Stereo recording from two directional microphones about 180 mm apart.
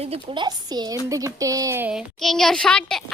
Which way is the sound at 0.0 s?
30° right (ahead or behind).